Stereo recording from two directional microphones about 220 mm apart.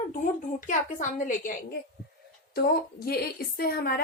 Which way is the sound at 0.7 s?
35° left (ahead or behind).